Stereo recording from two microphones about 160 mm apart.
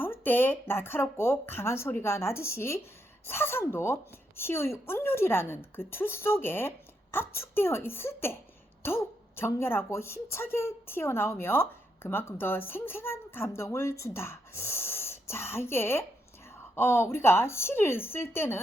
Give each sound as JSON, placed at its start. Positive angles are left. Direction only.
{"t": 0.0, "sound": "a woman's voice", "side_deg": 15}